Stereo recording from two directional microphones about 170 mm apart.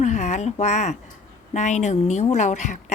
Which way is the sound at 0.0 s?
45° left (ahead or behind).